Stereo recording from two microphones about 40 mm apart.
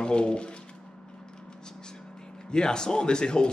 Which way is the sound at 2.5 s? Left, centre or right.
Centre.